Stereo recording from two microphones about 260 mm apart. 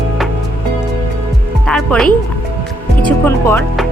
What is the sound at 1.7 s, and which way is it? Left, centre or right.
Speech, centre.